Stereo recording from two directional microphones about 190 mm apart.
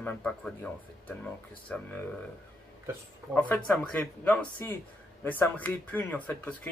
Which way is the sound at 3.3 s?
10° left (ahead or behind).